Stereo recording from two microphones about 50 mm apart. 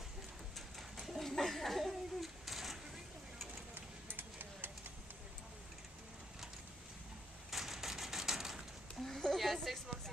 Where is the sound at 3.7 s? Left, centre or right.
Right.